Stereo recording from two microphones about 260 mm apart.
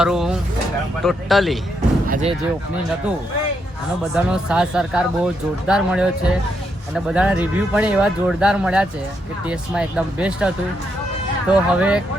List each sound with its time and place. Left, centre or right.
0.0 s speech: centre
2.0 s speech: right
4.1 s speech: centre